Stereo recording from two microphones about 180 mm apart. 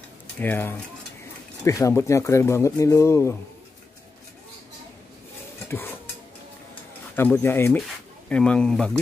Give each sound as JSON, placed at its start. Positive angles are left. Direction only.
{"t": 0.4, "sound": "speech", "side_deg": 10}
{"t": 5.7, "sound": "stir", "side_deg": 10}
{"t": 7.2, "sound": "speech", "side_deg": 10}